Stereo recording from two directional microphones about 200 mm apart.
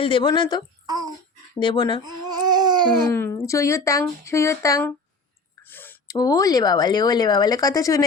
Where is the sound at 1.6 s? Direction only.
25° left (ahead or behind).